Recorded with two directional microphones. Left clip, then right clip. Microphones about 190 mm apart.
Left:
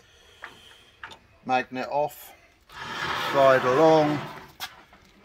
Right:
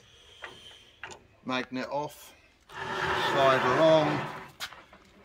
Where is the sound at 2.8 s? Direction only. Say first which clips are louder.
Even; 20° right (ahead or behind).